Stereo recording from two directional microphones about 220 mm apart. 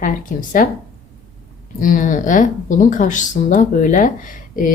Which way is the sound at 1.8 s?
35° left (ahead or behind).